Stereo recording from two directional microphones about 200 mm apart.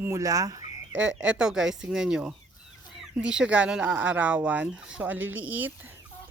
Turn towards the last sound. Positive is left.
turn(degrees=-10)  # may be behind; listen again after turning